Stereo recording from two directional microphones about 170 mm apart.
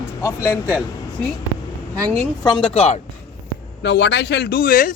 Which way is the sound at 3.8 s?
90° left.